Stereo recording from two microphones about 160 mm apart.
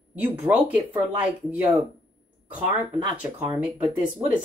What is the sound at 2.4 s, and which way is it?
Speech, 10° right (ahead or behind).